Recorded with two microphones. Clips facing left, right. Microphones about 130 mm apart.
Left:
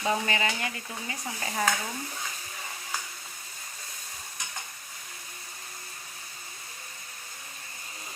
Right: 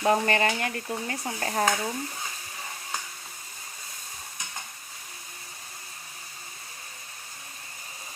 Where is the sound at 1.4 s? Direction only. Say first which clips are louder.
Right 4 dB; 55° right (ahead or behind).